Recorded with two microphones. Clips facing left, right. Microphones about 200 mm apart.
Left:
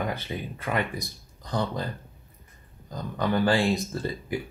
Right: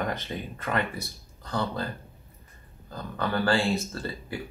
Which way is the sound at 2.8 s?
15° left (ahead or behind).